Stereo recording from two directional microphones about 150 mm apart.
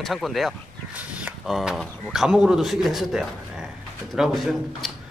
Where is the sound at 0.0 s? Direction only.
Centre (ahead or behind).